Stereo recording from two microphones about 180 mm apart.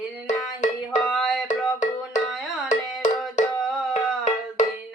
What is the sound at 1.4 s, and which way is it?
Music, 45° left (ahead or behind).